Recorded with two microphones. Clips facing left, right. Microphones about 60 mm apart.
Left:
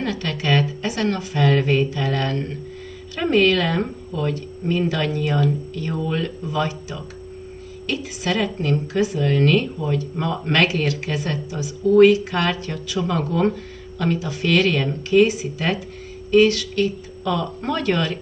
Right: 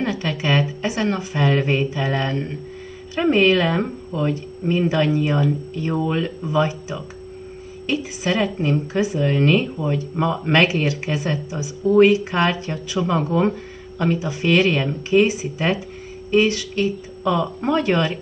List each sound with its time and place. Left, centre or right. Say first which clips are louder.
0.0 s speech: right 2 dB; centre